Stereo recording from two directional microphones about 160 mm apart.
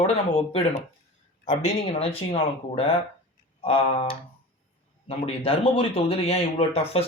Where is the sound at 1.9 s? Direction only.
35° left (ahead or behind).